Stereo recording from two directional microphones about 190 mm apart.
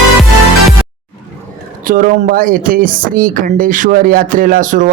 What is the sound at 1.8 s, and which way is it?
A man's voice, 45° right (ahead or behind).